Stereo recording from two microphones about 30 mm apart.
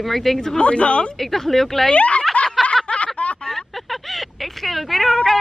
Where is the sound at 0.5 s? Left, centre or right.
Left.